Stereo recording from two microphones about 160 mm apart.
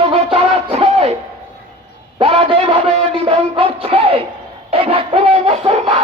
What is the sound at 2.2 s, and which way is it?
Music, 40° right (ahead or behind).